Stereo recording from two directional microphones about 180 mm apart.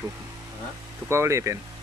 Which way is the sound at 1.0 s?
15° right (ahead or behind).